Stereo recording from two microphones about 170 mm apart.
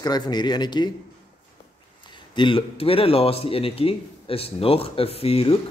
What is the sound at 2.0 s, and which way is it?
Speech, 25° left (ahead or behind).